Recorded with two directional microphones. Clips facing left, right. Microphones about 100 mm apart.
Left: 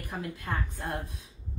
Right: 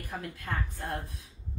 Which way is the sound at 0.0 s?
25° left (ahead or behind).